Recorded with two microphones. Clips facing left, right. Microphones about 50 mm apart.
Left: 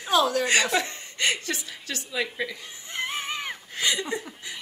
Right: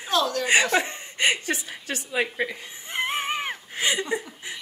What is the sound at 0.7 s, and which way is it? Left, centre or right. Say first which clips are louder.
A woman's voice: right 2 dB; right.